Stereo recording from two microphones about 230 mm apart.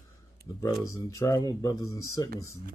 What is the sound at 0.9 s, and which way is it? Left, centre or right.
Speech, centre.